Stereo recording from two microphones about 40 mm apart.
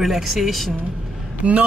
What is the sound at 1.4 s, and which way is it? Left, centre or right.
Speech, right.